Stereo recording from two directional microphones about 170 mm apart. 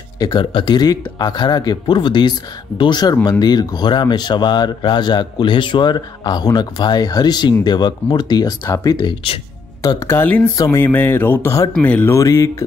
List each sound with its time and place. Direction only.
0.2 s speech: 25° left (ahead or behind)
9.8 s speech: 20° left (ahead or behind)